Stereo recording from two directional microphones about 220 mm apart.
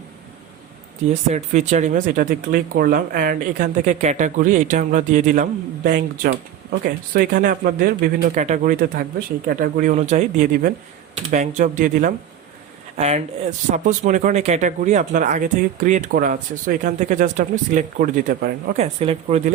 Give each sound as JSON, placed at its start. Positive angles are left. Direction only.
{"t": 1.3, "sound": "speech", "side_deg": -30}
{"t": 18.8, "sound": "speech", "side_deg": -30}